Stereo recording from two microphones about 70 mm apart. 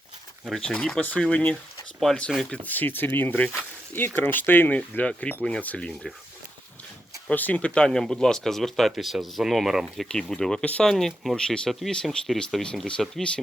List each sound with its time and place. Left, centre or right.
0.5 s speech: centre
7.3 s speech: left; by 10.1 s centre
10.1 s speech: centre
10.8 s speech: centre